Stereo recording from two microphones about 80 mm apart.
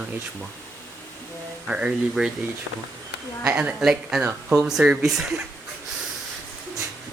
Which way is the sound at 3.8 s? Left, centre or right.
Centre.